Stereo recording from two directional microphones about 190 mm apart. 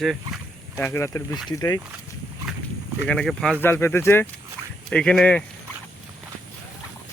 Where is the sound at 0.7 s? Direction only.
15° left (ahead or behind).